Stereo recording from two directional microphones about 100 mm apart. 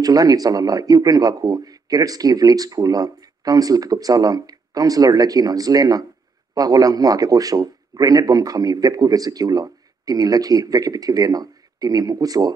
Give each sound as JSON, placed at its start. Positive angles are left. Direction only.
{"t": 0.0, "sound": "a man's voice", "side_deg": -40}